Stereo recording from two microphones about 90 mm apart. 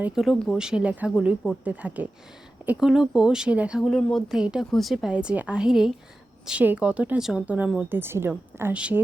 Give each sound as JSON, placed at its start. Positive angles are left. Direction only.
{"t": 0.1, "sound": "speech", "side_deg": 0}
{"t": 2.8, "sound": "speech", "side_deg": -5}
{"t": 3.8, "sound": "speech", "side_deg": 0}
{"t": 5.1, "sound": "a woman's voice", "side_deg": -15}
{"t": 7.4, "sound": "speech", "side_deg": -15}
{"t": 8.7, "sound": "speech", "side_deg": -15}